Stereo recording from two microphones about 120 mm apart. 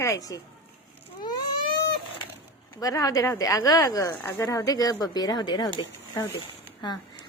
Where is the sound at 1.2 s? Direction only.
35° left (ahead or behind).